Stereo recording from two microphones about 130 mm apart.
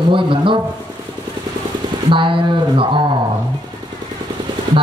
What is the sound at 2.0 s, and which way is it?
Speech, 40° right (ahead or behind).